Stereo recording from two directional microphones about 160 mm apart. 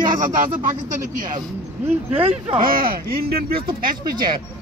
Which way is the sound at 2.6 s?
65° right (ahead or behind).